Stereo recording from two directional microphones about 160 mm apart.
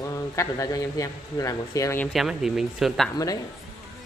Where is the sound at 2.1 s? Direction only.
Centre (ahead or behind).